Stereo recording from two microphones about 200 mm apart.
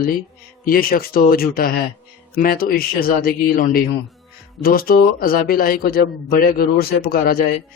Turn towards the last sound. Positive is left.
turn(degrees=50)  # may be behind; listen again after turning